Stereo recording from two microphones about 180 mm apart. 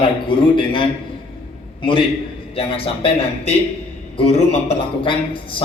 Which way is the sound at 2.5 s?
30° left (ahead or behind).